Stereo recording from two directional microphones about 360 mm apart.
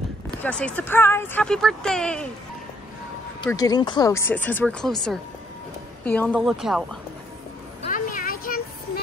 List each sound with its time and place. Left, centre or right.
0.4 s speech: centre
3.3 s speech: centre
7.8 s vehicle: left